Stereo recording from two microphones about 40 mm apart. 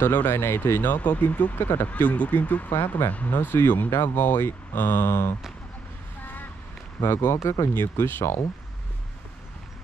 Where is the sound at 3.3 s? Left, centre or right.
Left.